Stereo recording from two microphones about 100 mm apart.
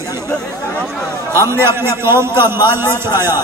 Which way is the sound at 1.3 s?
25° right (ahead or behind).